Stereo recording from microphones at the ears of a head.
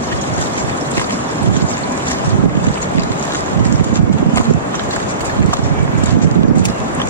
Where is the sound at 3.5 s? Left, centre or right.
Right.